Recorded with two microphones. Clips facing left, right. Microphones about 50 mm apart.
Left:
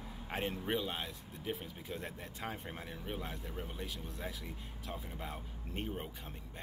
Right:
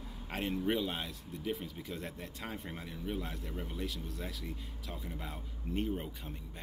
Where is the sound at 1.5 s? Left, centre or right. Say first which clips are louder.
Right 2 dB; left.